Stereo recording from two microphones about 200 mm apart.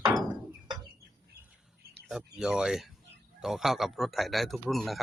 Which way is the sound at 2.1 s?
Centre (ahead or behind).